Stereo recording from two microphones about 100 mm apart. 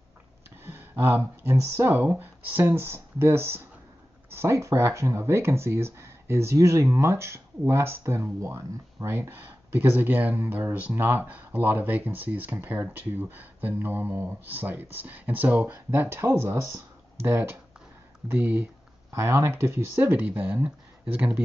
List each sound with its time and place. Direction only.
0.7 s speech: 20° right (ahead or behind)